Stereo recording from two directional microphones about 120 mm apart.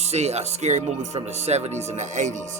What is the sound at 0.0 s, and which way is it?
Music, 65° right (ahead or behind).